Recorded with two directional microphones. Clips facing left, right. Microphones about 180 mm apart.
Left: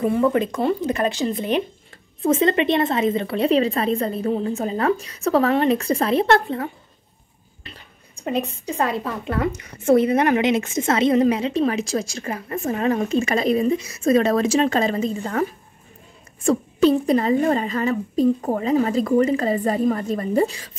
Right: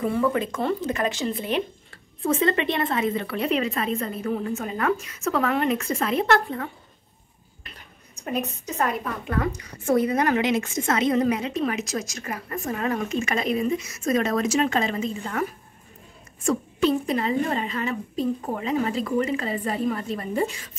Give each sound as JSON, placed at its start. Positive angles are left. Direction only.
{"t": 0.0, "sound": "a woman's voice", "side_deg": 20}
{"t": 8.3, "sound": "a woman's voice", "side_deg": 30}
{"t": 16.4, "sound": "a woman's voice", "side_deg": 35}